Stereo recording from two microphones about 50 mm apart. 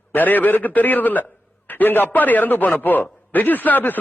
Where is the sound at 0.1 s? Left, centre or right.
Left.